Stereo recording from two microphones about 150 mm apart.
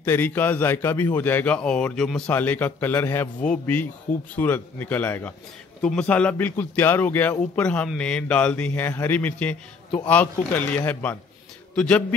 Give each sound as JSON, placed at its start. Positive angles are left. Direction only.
{"t": 0.0, "sound": "a man's voice", "side_deg": 15}